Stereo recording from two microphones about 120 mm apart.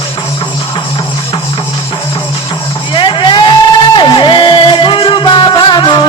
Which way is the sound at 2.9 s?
45° left (ahead or behind).